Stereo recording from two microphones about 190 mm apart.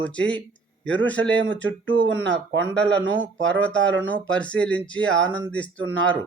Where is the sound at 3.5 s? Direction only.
5° left (ahead or behind).